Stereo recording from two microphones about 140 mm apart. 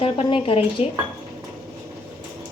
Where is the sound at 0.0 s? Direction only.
40° left (ahead or behind).